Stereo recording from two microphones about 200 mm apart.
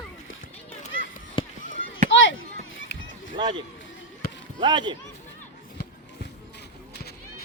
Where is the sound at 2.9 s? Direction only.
60° left (ahead or behind).